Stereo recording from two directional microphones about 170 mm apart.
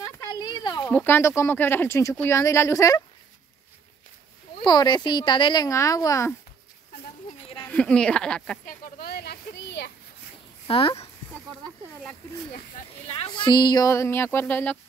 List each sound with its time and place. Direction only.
0.0 s a sound: 20° left (ahead or behind)
0.9 s speech: 10° left (ahead or behind)
4.6 s speech: 25° left (ahead or behind)
7.6 s speech: 5° left (ahead or behind)
8.6 s a sound: 55° left (ahead or behind); by 9.9 s 80° left
10.7 s speech: 35° left (ahead or behind)
13.1 s speech: 30° left (ahead or behind); by 14.8 s 10° left (ahead or behind)